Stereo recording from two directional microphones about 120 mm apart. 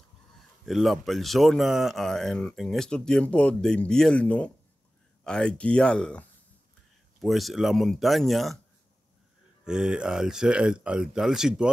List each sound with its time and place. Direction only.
0.7 s speech: centre (ahead or behind)
9.7 s speech: 5° right (ahead or behind)